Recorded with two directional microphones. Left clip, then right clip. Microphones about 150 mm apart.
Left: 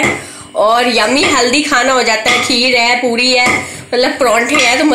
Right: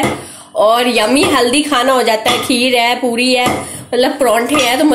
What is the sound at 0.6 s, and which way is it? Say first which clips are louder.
A woman's voice: left 1 dB; 10° right (ahead or behind).